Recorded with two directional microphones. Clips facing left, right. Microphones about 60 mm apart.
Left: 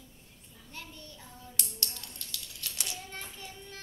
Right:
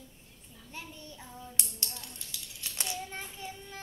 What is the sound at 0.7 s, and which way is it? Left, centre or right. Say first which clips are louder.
Child singing: right 2 dB; centre.